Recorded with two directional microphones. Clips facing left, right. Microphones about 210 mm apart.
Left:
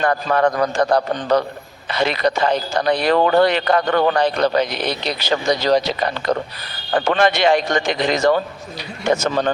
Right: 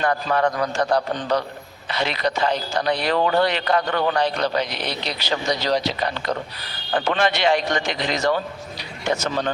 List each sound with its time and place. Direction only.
0.0 s speech: 50° left (ahead or behind)